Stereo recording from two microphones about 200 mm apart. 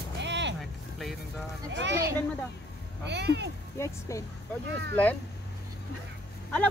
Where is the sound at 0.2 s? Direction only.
60° right (ahead or behind).